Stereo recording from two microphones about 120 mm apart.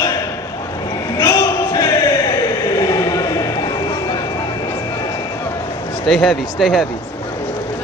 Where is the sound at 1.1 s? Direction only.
25° left (ahead or behind).